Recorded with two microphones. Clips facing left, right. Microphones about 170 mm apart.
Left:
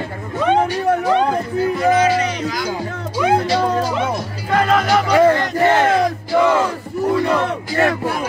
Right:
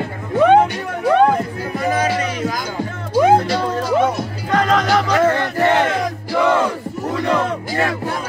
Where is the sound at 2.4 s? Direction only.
50° right (ahead or behind).